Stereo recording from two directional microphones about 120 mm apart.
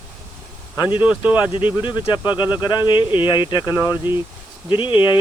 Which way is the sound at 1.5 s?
45° left (ahead or behind).